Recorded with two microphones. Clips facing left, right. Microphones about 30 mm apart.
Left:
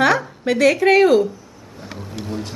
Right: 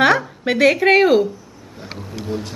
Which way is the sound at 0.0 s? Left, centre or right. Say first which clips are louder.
Right 2 dB; centre.